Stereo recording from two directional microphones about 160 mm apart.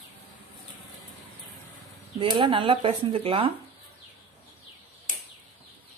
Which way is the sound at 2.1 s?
30° right (ahead or behind).